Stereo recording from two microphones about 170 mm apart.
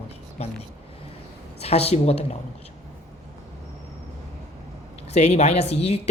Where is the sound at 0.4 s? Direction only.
40° left (ahead or behind).